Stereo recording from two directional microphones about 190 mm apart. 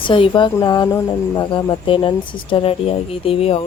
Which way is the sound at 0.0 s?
25° left (ahead or behind).